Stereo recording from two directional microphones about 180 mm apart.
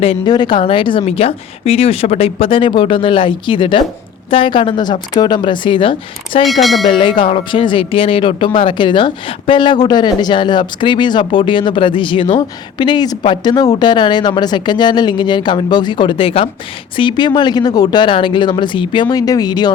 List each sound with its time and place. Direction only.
0.0 s speech: 30° left (ahead or behind)
6.4 s speech: centre (ahead or behind)
6.8 s speech: 30° left (ahead or behind)